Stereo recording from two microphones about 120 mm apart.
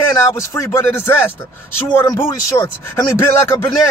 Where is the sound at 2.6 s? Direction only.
20° left (ahead or behind).